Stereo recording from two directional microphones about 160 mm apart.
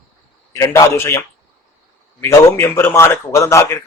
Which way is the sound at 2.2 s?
15° left (ahead or behind).